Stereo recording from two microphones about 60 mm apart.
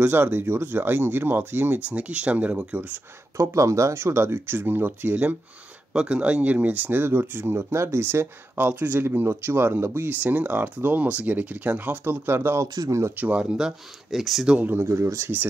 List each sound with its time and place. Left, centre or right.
0.0 s speech: right
1.9 s speech: centre
3.3 s speech: right
5.9 s speech: centre; by 10.1 s right
10.2 s speech: right
12.6 s speech: right
13.1 s speech: right
13.4 s speech: centre
14.8 s speech: right